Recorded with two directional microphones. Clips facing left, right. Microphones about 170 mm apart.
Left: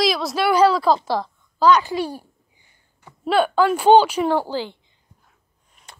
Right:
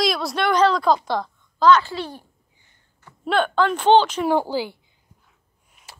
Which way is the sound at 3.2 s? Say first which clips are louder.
Left 2 dB; 5° left (ahead or behind).